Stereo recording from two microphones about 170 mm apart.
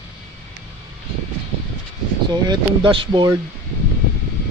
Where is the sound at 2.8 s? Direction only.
30° right (ahead or behind).